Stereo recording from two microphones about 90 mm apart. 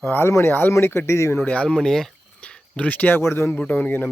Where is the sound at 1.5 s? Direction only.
10° left (ahead or behind).